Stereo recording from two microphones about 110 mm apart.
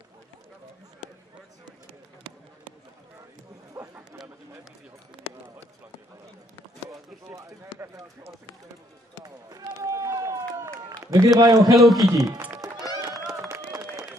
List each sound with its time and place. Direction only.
3.8 s chatter: 15° right (ahead or behind)
7.2 s run: 25° right (ahead or behind)
9.2 s run: 35° right (ahead or behind)
11.7 s a man's voice: centre (ahead or behind)
12.1 s speech: 30° right (ahead or behind)
12.5 s run: 35° right (ahead or behind)